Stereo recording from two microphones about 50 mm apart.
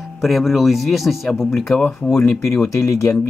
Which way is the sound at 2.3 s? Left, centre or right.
Left.